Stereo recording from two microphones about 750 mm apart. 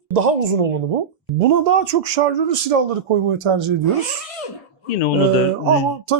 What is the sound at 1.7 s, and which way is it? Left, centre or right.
Speech, right.